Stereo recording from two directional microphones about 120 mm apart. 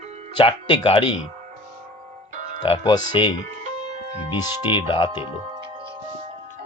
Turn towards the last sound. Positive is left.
turn(degrees=-45)  # may be behind; listen again after turning